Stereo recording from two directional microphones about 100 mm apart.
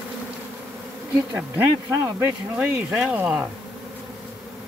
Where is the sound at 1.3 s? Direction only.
20° right (ahead or behind).